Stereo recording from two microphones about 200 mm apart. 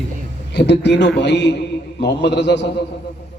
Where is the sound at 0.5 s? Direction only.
60° left (ahead or behind).